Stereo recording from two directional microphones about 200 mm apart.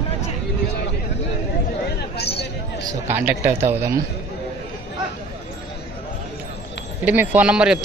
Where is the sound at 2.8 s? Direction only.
10° right (ahead or behind).